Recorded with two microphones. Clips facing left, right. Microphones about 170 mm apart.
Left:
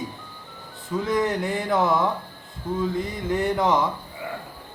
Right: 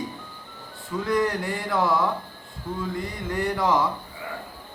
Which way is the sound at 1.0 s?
20° left (ahead or behind).